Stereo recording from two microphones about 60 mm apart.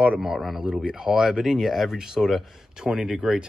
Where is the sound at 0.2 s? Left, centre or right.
Centre.